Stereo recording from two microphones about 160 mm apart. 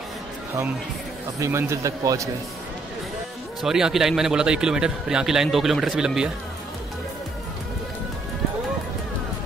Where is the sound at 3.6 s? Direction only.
5° right (ahead or behind).